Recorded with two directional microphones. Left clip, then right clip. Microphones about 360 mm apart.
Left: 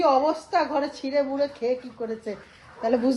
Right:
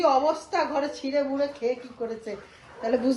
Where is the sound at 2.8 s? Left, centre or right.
Centre.